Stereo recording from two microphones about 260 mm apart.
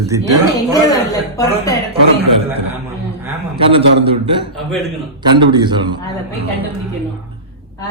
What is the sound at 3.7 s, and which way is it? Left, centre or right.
Speech, right.